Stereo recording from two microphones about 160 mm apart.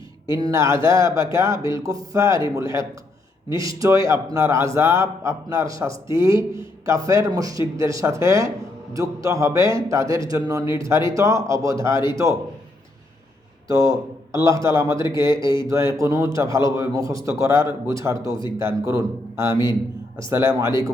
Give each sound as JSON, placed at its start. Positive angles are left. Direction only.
{"t": 0.3, "sound": "a man's voice", "side_deg": -20}
{"t": 13.7, "sound": "a man's voice", "side_deg": -20}
{"t": 14.9, "sound": "speech", "side_deg": 30}
{"t": 15.2, "sound": "a man's voice", "side_deg": -20}